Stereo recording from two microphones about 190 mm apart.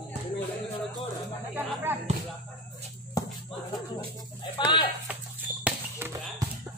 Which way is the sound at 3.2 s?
20° left (ahead or behind).